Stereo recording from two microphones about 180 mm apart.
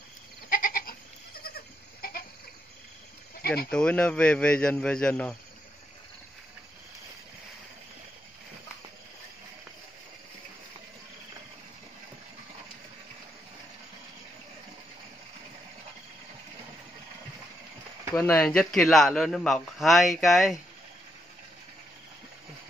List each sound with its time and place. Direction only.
0.5 s goat: 50° left (ahead or behind)
3.4 s speech: 60° left (ahead or behind)
3.7 s a man's voice: 5° left (ahead or behind)
18.2 s a man's voice: 5° left (ahead or behind)